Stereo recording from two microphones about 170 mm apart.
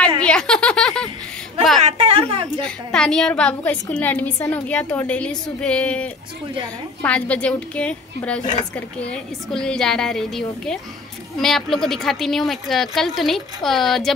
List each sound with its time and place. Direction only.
0.2 s speech: 5° left (ahead or behind)
1.8 s a woman's voice: 40° right (ahead or behind)
2.6 s a woman's voice: 5° left (ahead or behind)